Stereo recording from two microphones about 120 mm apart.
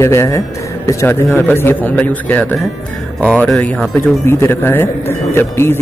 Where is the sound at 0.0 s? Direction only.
25° left (ahead or behind).